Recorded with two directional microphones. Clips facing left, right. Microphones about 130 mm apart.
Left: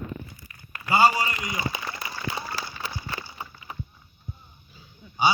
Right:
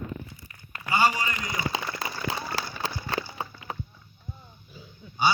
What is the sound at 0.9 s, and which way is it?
Speech, 40° left (ahead or behind).